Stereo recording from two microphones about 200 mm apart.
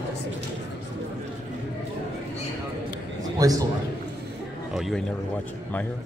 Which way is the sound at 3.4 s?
20° right (ahead or behind).